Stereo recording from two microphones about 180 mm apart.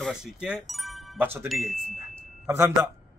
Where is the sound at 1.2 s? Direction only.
10° right (ahead or behind).